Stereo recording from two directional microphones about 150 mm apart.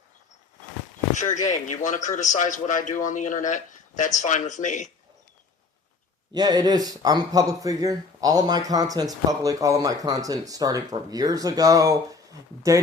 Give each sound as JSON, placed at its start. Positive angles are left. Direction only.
{"t": 1.1, "sound": "a man's voice", "side_deg": 55}
{"t": 6.3, "sound": "speech", "side_deg": -25}